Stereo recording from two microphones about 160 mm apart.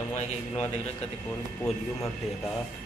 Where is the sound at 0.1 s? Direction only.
45° left (ahead or behind).